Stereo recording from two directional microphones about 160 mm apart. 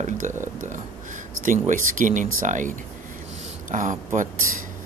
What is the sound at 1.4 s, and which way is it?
Speech, 55° right (ahead or behind).